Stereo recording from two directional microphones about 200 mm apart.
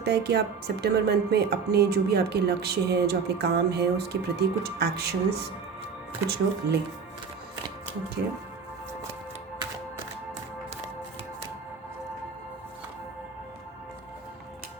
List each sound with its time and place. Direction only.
0.0 s speech: 55° right (ahead or behind)
6.2 s speech: 55° right (ahead or behind)
8.2 s speech: 55° right (ahead or behind)